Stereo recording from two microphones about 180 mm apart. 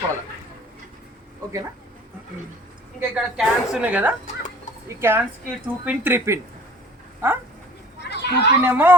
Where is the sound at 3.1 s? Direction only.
5° right (ahead or behind).